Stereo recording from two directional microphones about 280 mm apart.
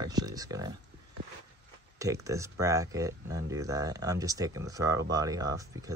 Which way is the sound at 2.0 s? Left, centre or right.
Centre.